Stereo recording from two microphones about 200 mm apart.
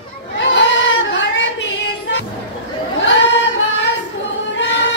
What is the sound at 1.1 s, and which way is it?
Child singing, 65° left (ahead or behind).